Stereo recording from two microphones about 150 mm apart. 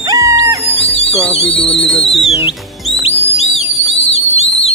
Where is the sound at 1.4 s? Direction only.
10° left (ahead or behind).